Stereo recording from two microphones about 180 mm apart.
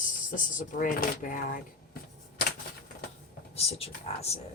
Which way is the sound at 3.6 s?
35° left (ahead or behind).